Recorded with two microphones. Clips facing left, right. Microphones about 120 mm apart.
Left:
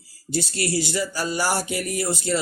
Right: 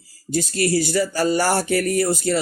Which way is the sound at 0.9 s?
55° right (ahead or behind).